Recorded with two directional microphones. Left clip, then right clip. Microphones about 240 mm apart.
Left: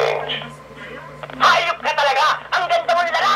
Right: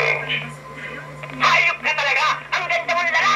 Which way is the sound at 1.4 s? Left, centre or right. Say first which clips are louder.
Left 1 dB; left.